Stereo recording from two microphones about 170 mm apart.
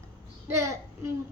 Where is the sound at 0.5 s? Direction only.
15° right (ahead or behind).